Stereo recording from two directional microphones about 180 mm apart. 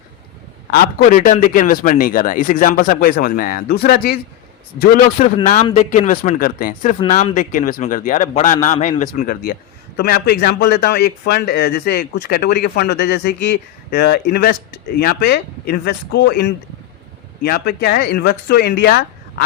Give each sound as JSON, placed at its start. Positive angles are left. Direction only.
{"t": 0.7, "sound": "a man's voice", "side_deg": 60}
{"t": 5.2, "sound": "a man's voice", "side_deg": 45}